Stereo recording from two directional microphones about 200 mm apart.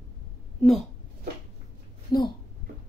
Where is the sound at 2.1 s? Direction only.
20° left (ahead or behind).